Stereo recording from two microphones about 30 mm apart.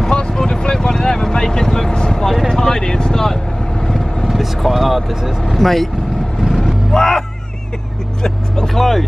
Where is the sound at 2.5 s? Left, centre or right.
Left.